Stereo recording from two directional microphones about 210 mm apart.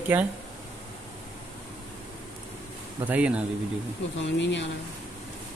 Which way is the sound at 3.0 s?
5° right (ahead or behind).